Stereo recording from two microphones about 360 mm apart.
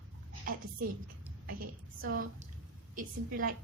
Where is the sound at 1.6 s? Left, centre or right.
Right.